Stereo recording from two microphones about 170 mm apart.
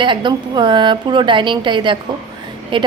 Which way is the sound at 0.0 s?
30° right (ahead or behind).